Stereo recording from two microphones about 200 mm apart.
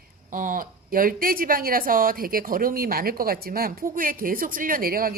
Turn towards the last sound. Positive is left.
turn(degrees=-45)  # may be behind; listen again after turning